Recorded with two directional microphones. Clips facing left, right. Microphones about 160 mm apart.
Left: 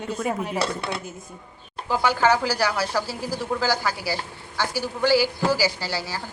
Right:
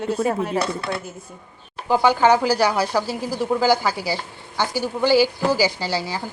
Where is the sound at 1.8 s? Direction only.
20° right (ahead or behind).